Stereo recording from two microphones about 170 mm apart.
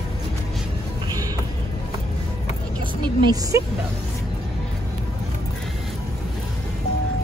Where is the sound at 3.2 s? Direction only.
20° right (ahead or behind).